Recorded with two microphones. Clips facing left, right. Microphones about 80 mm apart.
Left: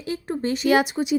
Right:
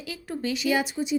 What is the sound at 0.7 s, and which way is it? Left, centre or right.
Speech, left.